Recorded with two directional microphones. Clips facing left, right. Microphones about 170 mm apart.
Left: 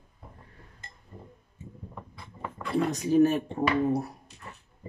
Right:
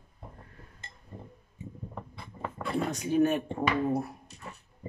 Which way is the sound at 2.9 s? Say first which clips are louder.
Left 3 dB; 40° left (ahead or behind).